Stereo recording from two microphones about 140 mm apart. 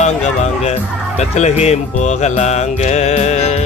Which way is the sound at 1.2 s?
50° left (ahead or behind).